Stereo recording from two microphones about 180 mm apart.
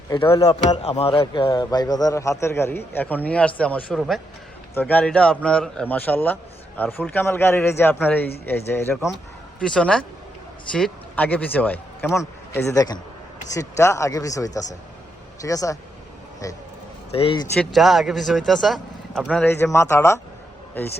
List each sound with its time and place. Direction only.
0.4 s a man's voice: 35° left (ahead or behind); by 15.8 s 20° left (ahead or behind)
17.1 s speech: 30° left (ahead or behind)
17.6 s speech: centre (ahead or behind)